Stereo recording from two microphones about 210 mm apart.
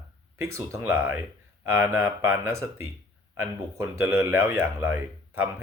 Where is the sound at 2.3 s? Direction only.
15° right (ahead or behind).